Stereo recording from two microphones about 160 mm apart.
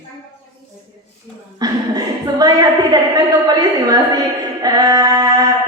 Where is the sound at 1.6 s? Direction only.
25° right (ahead or behind).